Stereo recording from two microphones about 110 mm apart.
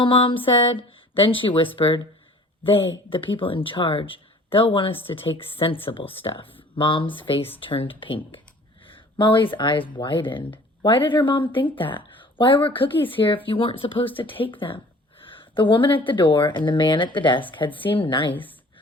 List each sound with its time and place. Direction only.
0.0 s speech: 50° left (ahead or behind)
15.2 s a sound: 50° left (ahead or behind)
16.0 s speech: 50° left (ahead or behind)
17.7 s a woman's voice: 15° left (ahead or behind)
18.0 s speech: 50° left (ahead or behind)